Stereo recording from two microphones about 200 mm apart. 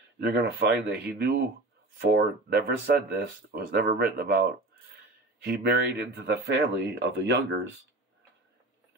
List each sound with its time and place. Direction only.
0.2 s speech: 55° right (ahead or behind)